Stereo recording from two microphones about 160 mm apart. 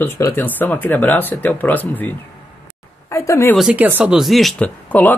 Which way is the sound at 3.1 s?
20° left (ahead or behind).